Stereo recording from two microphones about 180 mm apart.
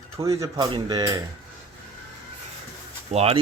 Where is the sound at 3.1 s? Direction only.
35° right (ahead or behind).